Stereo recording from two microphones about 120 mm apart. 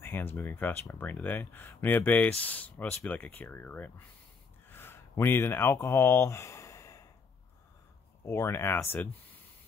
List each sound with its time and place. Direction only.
0.0 s speech: 20° left (ahead or behind)
4.6 s a sound: 20° left (ahead or behind)
8.3 s speech: 20° left (ahead or behind)